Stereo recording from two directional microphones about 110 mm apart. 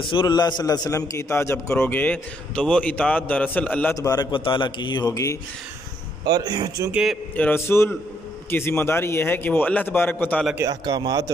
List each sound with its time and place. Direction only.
0.0 s a man's voice: 50° left (ahead or behind)
0.8 s a man's voice: 30° left (ahead or behind)
3.9 s a man's voice: 35° left (ahead or behind)
4.3 s a man's voice: 45° left (ahead or behind)
6.2 s a man's voice: 35° right (ahead or behind)
6.9 s a man's voice: 5° right (ahead or behind)
7.3 s a man's voice: 20° left (ahead or behind)
10.7 s a man's voice: 35° right (ahead or behind)